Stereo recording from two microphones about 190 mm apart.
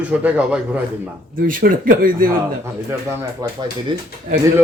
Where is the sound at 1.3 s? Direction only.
45° right (ahead or behind).